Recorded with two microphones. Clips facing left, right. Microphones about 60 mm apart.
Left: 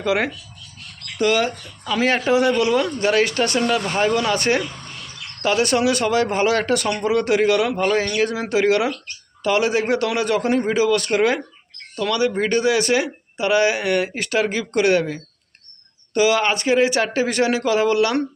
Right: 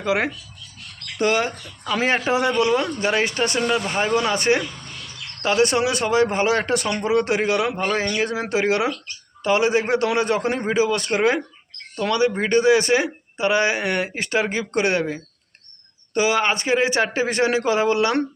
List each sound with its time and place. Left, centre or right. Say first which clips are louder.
0.0 s speech: left 1 dB; centre
1.2 s speech: left 2 dB; right